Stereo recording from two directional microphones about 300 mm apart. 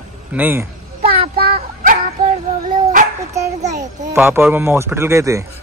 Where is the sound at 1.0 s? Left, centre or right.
Right.